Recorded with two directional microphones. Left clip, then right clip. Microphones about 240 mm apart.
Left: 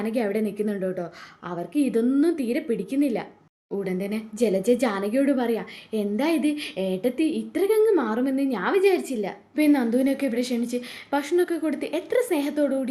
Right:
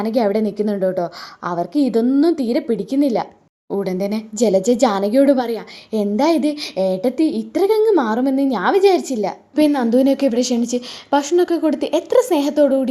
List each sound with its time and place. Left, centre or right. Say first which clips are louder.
0.0 s a woman's voice: right 8 dB; centre